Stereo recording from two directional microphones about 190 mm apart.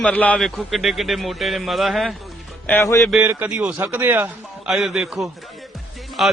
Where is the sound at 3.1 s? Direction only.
5° right (ahead or behind).